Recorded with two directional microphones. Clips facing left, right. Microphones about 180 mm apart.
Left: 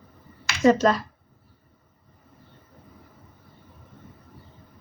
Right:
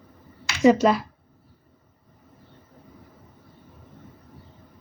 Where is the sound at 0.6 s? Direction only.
10° right (ahead or behind).